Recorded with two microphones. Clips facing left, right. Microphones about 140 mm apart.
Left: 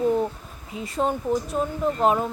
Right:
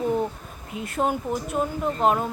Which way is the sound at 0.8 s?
5° right (ahead or behind).